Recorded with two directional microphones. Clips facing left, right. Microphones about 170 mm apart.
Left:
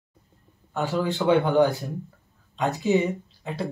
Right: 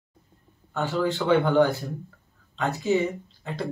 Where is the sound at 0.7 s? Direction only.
15° left (ahead or behind).